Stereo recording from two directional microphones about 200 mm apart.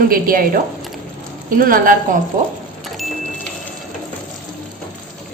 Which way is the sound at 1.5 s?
45° right (ahead or behind).